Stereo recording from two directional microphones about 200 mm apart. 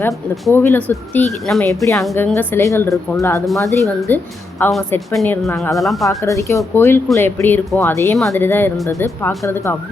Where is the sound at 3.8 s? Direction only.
15° right (ahead or behind).